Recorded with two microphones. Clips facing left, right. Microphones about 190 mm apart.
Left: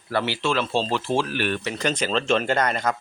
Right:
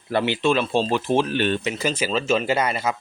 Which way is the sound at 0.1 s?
20° right (ahead or behind).